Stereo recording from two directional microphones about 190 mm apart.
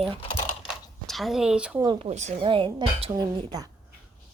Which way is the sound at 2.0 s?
35° right (ahead or behind).